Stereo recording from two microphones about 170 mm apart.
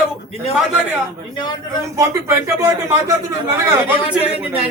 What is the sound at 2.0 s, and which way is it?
Speech, 15° right (ahead or behind).